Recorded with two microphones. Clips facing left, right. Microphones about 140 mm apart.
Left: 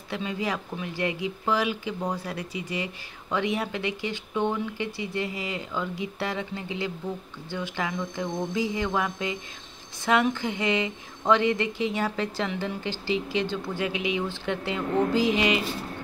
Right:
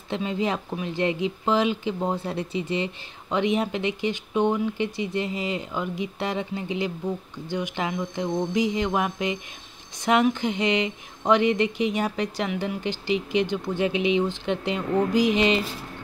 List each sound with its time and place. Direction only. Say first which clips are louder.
0.1 s speech: right 4 dB; 25° right (ahead or behind)